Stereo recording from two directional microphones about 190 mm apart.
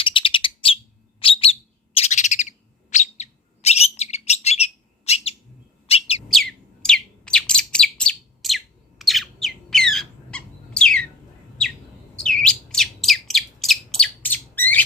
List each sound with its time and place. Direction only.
0.0 s bird: 25° left (ahead or behind)
6.2 s bird: centre (ahead or behind)
12.4 s bird: 5° left (ahead or behind)